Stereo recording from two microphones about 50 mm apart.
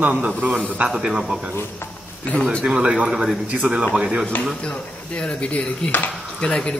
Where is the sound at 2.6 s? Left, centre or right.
Centre.